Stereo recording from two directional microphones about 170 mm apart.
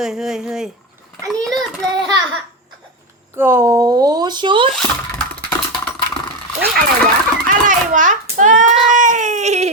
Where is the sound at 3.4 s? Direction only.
15° right (ahead or behind); by 4.7 s 30° right (ahead or behind).